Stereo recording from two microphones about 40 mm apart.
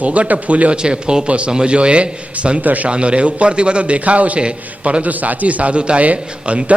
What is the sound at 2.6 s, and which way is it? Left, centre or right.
Speech, right.